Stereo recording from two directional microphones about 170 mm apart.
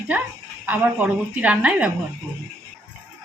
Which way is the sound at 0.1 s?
10° right (ahead or behind).